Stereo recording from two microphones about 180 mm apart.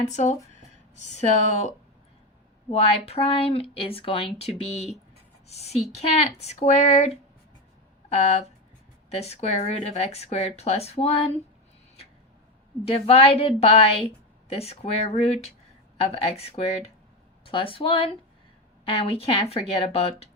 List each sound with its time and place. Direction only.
0.1 s a woman's voice: 40° left (ahead or behind)
8.1 s a woman's voice: 35° left (ahead or behind)
12.8 s a woman's voice: 30° left (ahead or behind)